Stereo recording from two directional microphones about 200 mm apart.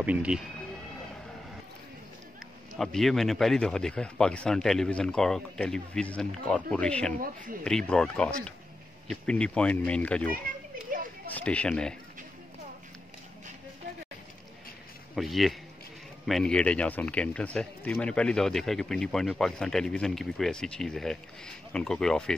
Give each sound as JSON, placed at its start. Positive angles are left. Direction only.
{"t": 0.0, "sound": "speech", "side_deg": -5}
{"t": 2.8, "sound": "speech", "side_deg": 0}
{"t": 10.9, "sound": "a sound", "side_deg": -45}
{"t": 11.3, "sound": "speech", "side_deg": 5}
{"t": 15.1, "sound": "speech", "side_deg": 0}